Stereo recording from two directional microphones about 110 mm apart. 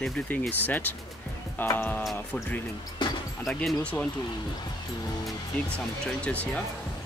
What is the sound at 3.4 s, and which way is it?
Speech, centre (ahead or behind).